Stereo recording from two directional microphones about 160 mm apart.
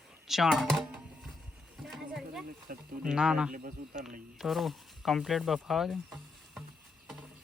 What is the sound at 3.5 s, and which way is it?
Speech, 60° right (ahead or behind).